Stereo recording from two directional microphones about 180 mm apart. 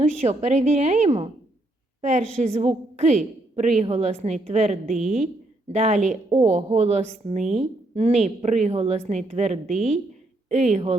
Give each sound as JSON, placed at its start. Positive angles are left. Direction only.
{"t": 0.3, "sound": "a woman's voice", "side_deg": -40}